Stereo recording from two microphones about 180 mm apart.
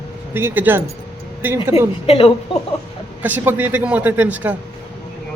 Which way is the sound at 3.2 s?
10° right (ahead or behind).